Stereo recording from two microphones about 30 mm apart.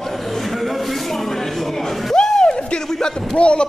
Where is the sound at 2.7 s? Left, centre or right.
Left.